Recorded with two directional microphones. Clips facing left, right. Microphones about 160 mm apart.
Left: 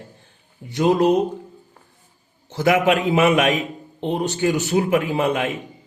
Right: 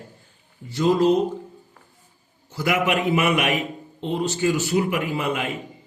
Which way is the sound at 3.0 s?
90° left.